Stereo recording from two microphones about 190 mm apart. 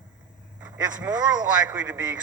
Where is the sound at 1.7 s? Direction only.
5° right (ahead or behind).